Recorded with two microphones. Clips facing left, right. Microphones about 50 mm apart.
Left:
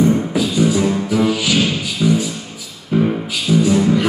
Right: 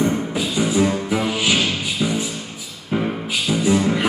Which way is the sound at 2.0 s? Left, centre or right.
Centre.